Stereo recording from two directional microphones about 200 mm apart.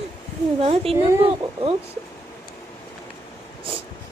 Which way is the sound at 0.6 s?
30° right (ahead or behind).